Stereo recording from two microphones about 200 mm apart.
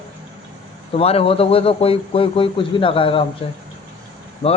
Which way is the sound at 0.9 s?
30° left (ahead or behind).